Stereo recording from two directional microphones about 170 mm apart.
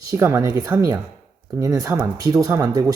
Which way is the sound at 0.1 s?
15° right (ahead or behind).